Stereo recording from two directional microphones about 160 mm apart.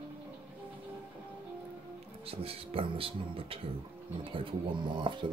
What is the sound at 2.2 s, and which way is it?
Speech, 35° right (ahead or behind).